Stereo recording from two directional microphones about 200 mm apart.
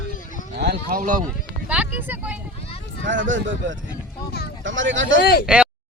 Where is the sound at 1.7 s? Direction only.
10° right (ahead or behind).